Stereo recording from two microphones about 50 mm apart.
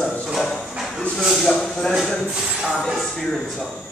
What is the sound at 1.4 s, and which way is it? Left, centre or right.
Speech, centre.